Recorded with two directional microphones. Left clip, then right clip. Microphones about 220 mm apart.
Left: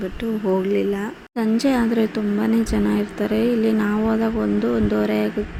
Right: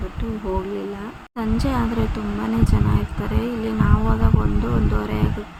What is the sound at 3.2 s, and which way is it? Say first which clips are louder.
Speech: left 8 dB; 20° left (ahead or behind).